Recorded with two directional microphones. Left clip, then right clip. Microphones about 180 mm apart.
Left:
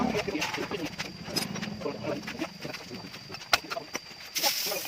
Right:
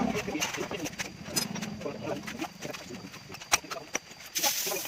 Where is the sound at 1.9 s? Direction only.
20° left (ahead or behind).